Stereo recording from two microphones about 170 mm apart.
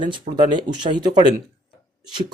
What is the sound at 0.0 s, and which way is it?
Speech, 25° right (ahead or behind).